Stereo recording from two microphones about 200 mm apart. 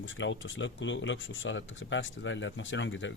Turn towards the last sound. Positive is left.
turn(degrees=70)  # may be behind; listen again after turning